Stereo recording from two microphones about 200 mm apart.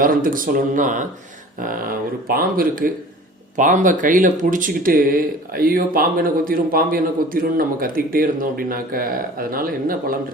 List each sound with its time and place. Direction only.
0.0 s speech: 45° right (ahead or behind)